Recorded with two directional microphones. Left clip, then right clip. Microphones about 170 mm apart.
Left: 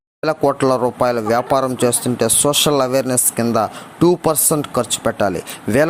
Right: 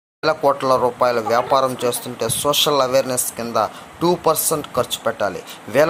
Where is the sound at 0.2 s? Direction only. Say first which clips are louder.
Left 1 dB; 50° left (ahead or behind).